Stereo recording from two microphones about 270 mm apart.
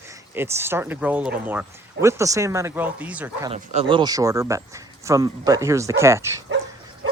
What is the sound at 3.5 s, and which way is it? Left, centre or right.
Speech, right.